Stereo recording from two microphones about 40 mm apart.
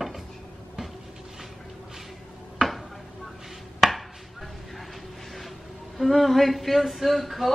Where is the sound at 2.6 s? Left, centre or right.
Centre.